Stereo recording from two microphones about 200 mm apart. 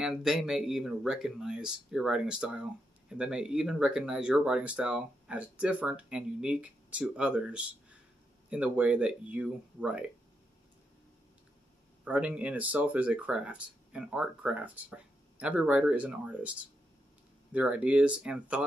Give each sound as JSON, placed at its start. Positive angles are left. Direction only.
{"t": 0.0, "sound": "speech", "side_deg": -5}
{"t": 12.0, "sound": "speech", "side_deg": -5}